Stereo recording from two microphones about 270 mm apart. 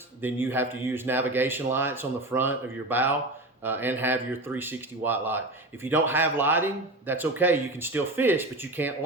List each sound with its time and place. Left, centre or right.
0.2 s speech: centre